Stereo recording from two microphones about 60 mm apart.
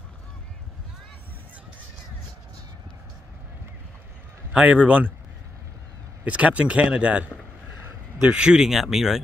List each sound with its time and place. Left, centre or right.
4.5 s speech: right
6.2 s speech: right; by 9.2 s centre